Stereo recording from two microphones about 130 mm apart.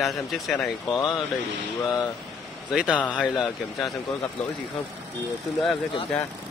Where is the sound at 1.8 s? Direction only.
30° left (ahead or behind).